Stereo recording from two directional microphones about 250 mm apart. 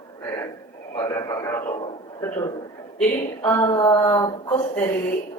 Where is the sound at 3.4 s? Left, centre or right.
Centre.